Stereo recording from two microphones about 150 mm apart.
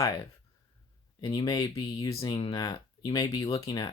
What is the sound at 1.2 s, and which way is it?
Speech, 30° left (ahead or behind).